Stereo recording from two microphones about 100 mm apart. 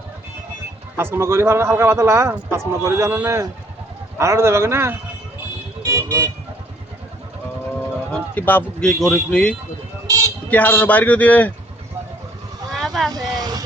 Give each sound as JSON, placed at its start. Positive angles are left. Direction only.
{"t": 0.9, "sound": "speech", "side_deg": -25}
{"t": 5.8, "sound": "vehicle", "side_deg": -30}
{"t": 8.1, "sound": "a man's voice", "side_deg": 15}
{"t": 8.9, "sound": "a man's voice", "side_deg": 5}
{"t": 10.1, "sound": "a sound", "side_deg": -35}
{"t": 10.5, "sound": "a man's voice", "side_deg": 15}
{"t": 12.7, "sound": "vehicle", "side_deg": 0}
{"t": 13.1, "sound": "vehicle", "side_deg": -40}